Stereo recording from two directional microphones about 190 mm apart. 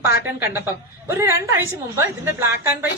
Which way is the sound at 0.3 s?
10° right (ahead or behind).